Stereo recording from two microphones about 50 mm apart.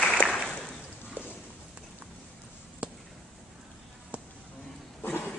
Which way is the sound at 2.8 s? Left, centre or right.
Right.